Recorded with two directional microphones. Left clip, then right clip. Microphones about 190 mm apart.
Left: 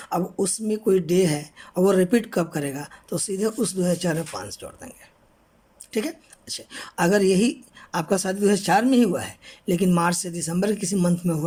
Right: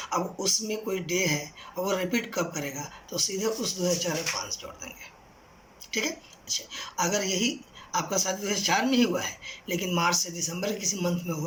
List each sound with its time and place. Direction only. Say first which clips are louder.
0.0 s speech: left 3 dB; 50° left (ahead or behind)
6.7 s speech: left 8 dB; 50° left (ahead or behind)